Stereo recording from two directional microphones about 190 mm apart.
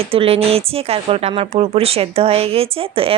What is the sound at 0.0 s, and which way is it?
Speech, 30° right (ahead or behind).